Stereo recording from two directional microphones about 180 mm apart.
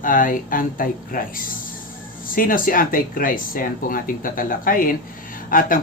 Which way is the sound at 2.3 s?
50° left (ahead or behind).